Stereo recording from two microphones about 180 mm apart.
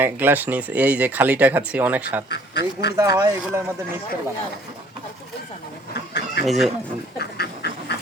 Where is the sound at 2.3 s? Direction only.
70° left (ahead or behind).